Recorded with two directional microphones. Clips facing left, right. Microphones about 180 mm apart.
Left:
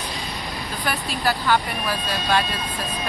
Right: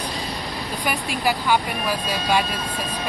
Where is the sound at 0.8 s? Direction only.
15° right (ahead or behind).